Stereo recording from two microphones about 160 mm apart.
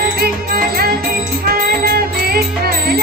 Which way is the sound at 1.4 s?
70° right (ahead or behind).